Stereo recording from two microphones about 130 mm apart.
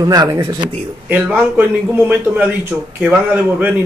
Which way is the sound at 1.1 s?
15° right (ahead or behind).